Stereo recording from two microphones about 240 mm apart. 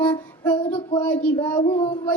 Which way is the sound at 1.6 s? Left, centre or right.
Left.